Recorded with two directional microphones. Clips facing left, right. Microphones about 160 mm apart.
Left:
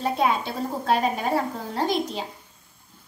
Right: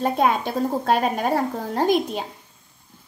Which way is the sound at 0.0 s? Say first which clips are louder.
Right 3 dB; 50° right (ahead or behind).